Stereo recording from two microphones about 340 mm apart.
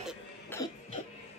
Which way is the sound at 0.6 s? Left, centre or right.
Centre.